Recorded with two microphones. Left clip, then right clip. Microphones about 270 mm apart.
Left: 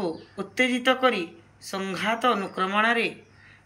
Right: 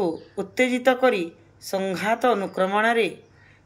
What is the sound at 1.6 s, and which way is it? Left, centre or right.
A woman's voice, centre.